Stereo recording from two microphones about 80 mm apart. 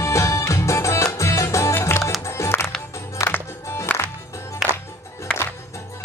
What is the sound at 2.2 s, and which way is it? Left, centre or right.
Music, left.